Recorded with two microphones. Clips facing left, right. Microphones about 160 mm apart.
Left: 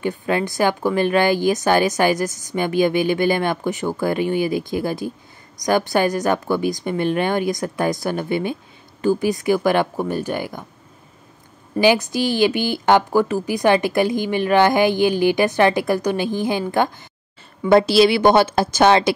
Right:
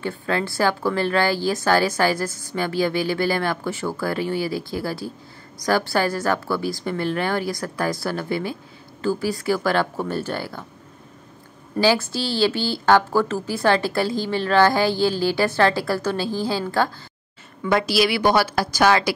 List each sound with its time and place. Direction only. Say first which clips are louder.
0.0 s a woman's voice: left 3 dB; 15° left (ahead or behind)
11.8 s a woman's voice: left 3 dB; 15° left (ahead or behind)